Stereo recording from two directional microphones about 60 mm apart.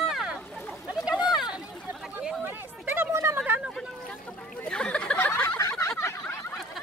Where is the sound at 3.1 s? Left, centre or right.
Right.